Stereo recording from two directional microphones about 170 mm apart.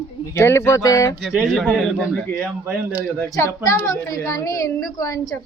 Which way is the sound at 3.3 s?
15° left (ahead or behind).